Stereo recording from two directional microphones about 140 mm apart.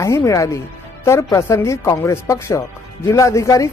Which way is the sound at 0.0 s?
20° left (ahead or behind).